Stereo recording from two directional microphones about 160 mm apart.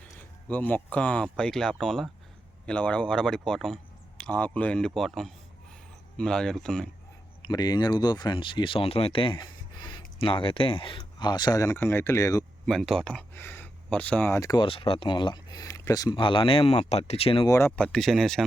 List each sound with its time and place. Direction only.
0.0 s speech: 10° left (ahead or behind)
7.4 s speech: 25° left (ahead or behind)
12.6 s speech: 5° left (ahead or behind); by 17.4 s 40° left (ahead or behind)
17.4 s speech: 20° left (ahead or behind)
17.7 s speech: 5° left (ahead or behind)